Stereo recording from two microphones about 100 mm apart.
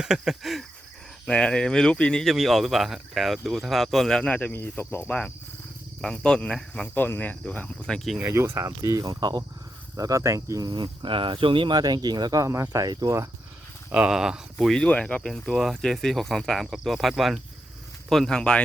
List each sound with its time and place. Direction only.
0.0 s speech: 5° right (ahead or behind); by 5.1 s 20° left (ahead or behind)
6.0 s speech: 5° left (ahead or behind)
6.8 s speech: 20° left (ahead or behind); by 8.2 s 5° left (ahead or behind)
8.2 s speech: 25° right (ahead or behind); by 11.8 s 55° right (ahead or behind)
11.8 s speech: 45° right (ahead or behind)
13.9 s speech: 10° right (ahead or behind)
14.7 s speech: 10° left (ahead or behind)